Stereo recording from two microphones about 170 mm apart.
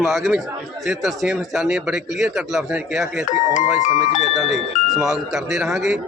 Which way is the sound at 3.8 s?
45° left (ahead or behind).